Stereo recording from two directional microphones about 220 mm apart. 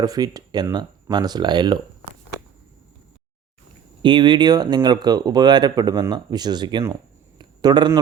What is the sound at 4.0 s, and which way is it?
Speech, 20° right (ahead or behind).